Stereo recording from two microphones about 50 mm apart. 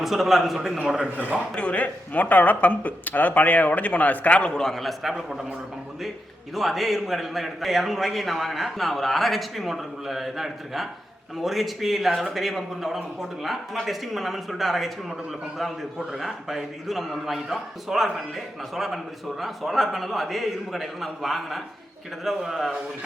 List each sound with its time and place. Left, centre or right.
0.0 s a man's voice: centre
1.1 s a man's voice: right
1.5 s speech: left
4.6 s a man's voice: centre
6.5 s a man's voice: centre